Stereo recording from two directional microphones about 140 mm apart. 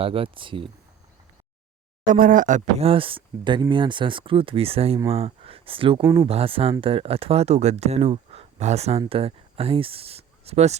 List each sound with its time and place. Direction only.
0.0 s speech: 40° right (ahead or behind)
2.0 s a man's voice: 75° right (ahead or behind)
2.8 s speech: 40° right (ahead or behind)
6.0 s speech: 20° right (ahead or behind)
6.2 s speech: 40° right (ahead or behind)